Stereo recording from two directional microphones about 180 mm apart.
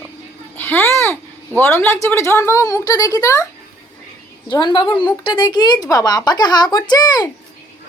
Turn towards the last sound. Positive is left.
turn(degrees=20)  # may be behind; listen again after turning